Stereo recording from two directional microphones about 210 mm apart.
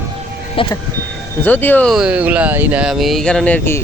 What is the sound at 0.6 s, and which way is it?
Speech, 25° left (ahead or behind).